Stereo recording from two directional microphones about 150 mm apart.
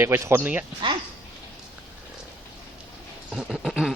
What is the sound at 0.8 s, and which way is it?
Speech, 30° right (ahead or behind).